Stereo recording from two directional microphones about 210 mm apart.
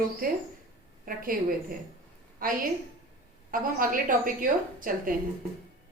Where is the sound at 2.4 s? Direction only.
40° right (ahead or behind).